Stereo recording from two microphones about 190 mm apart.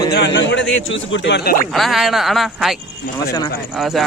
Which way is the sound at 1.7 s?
Centre (ahead or behind).